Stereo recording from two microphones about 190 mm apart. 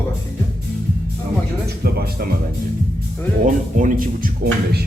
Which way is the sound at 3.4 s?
45° right (ahead or behind).